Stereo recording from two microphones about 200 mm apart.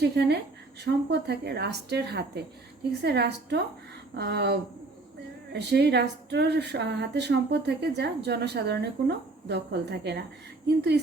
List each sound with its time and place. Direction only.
0.0 s a woman's voice: 55° right (ahead or behind)
5.5 s speech: 55° right (ahead or behind)